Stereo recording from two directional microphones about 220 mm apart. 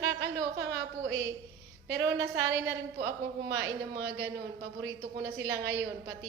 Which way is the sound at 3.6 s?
50° right (ahead or behind).